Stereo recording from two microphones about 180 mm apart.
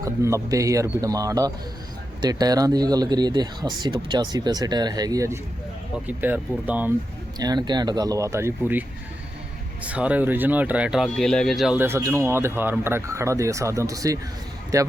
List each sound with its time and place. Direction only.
0.0 s speech: 15° right (ahead or behind)
7.3 s speech: 20° right (ahead or behind)
9.8 s speech: 5° right (ahead or behind)
11.8 s speech: 15° right (ahead or behind)